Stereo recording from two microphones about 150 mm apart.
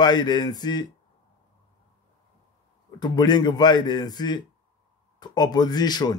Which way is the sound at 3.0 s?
30° left (ahead or behind).